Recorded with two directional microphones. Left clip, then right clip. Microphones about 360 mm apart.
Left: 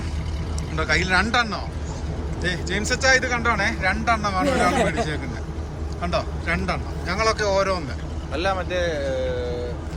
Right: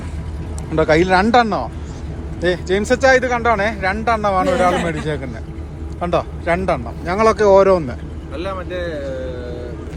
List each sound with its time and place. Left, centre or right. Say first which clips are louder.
0.8 s speech: right 7 dB; centre
6.0 s speech: right 6 dB; centre
8.3 s speech: left 1 dB; left